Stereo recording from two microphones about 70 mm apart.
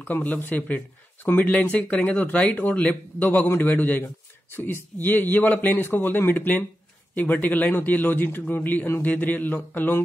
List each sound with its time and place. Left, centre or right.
0.0 s speech: left